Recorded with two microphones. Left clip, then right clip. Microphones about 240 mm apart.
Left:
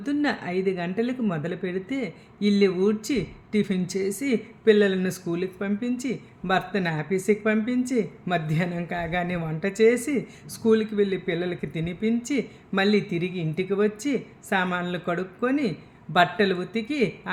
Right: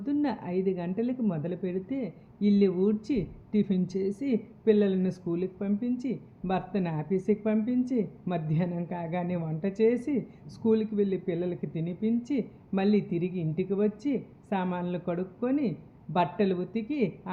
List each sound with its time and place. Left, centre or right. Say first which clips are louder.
0.0 s a woman's voice: left 4 dB; centre